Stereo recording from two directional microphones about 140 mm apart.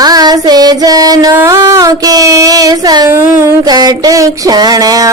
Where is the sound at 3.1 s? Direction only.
15° right (ahead or behind).